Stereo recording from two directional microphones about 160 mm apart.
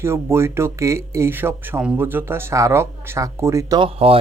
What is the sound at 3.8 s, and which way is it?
Speech, 35° right (ahead or behind).